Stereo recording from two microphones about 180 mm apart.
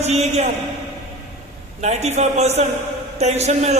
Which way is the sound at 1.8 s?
35° right (ahead or behind).